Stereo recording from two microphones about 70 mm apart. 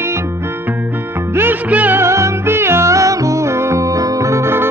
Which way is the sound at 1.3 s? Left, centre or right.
Right.